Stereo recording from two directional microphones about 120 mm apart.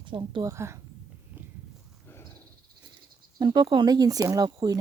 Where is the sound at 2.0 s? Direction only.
20° left (ahead or behind).